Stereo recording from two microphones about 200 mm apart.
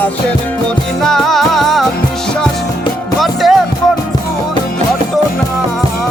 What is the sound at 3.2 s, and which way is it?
Music, centre (ahead or behind).